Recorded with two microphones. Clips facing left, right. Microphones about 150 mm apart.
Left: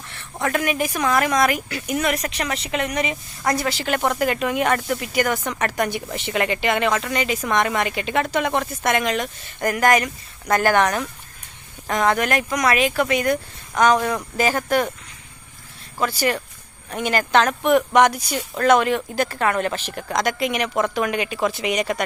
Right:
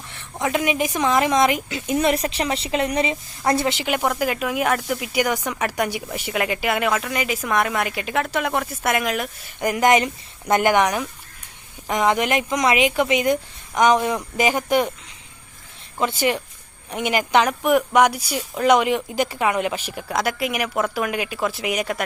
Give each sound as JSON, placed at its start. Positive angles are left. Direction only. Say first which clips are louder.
{"t": 0.1, "sound": "a woman's voice", "louder": "even", "side_deg": -15}
{"t": 16.0, "sound": "speech", "louder": "right 1 dB", "side_deg": -20}